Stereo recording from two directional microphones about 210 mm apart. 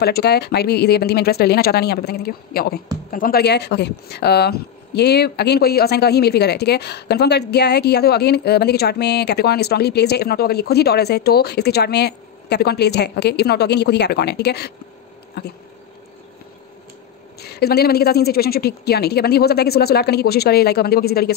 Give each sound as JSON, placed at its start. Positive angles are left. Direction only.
{"t": 0.0, "sound": "speech", "side_deg": 50}
{"t": 15.4, "sound": "a sound", "side_deg": 50}
{"t": 17.4, "sound": "speech", "side_deg": 50}